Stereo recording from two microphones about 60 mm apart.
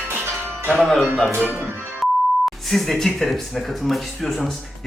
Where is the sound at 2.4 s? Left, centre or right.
Centre.